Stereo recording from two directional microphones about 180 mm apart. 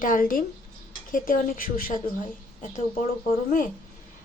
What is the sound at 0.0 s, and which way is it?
A woman's voice, 50° left (ahead or behind).